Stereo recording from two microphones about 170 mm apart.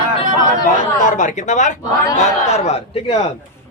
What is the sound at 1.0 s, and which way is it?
A man's voice, 50° left (ahead or behind).